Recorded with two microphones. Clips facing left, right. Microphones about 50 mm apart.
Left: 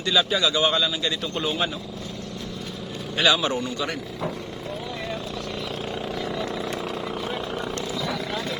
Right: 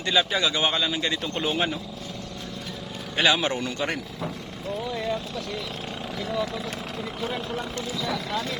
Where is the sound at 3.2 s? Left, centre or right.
Right.